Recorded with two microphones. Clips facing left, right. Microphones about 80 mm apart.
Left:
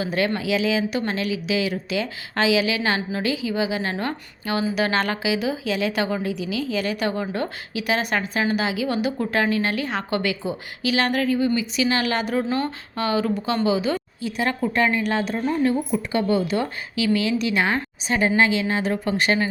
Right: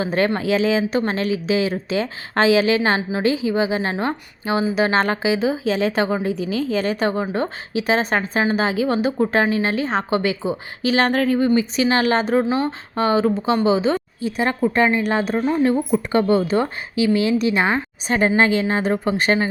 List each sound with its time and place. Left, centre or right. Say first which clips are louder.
0.0 s speech: right 4 dB; right
12.5 s speech: right 4 dB; centre
13.0 s a woman's voice: right 5 dB; right
15.0 s speech: right 3 dB; right
18.1 s speech: right 3 dB; right